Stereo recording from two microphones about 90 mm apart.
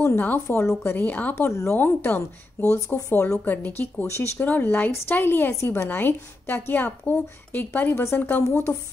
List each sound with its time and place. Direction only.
0.0 s speech: 20° left (ahead or behind)
1.5 s a woman's voice: 35° left (ahead or behind)
1.8 s speech: 20° left (ahead or behind)
7.9 s a woman's voice: 30° left (ahead or behind)
8.2 s speech: 20° left (ahead or behind)